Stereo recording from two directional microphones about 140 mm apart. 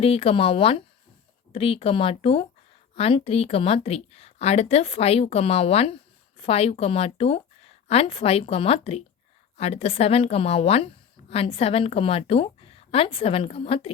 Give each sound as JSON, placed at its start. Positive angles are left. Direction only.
{"t": 0.0, "sound": "speech", "side_deg": 40}